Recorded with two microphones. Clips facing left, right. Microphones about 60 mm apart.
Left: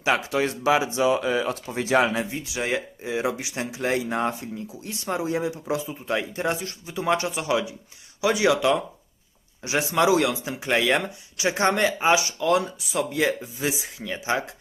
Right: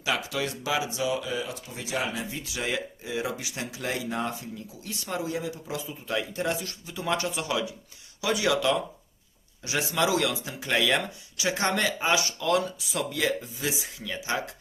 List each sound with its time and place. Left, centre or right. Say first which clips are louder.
0.0 s speech: left 6 dB; left
2.5 s speech: left 4 dB; left